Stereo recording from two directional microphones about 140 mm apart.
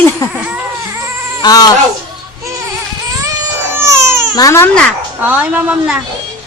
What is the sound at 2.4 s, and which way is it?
Music, 20° right (ahead or behind).